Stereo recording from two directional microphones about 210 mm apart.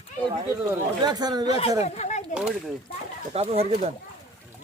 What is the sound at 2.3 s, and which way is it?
Speech, 5° right (ahead or behind).